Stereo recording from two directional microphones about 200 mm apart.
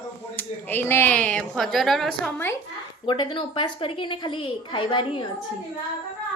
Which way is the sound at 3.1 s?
25° left (ahead or behind).